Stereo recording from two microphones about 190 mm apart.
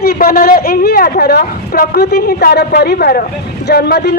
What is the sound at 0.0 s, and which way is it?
A man's voice, 55° left (ahead or behind).